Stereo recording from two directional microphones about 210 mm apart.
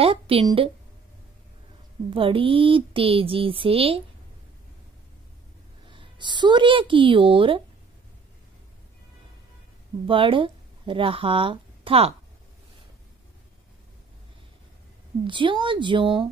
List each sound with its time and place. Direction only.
0.0 s a woman's voice: 25° right (ahead or behind)
2.0 s speech: 25° right (ahead or behind)
5.9 s a woman's voice: 25° right (ahead or behind)
10.0 s speech: 25° right (ahead or behind)
15.2 s speech: 25° right (ahead or behind)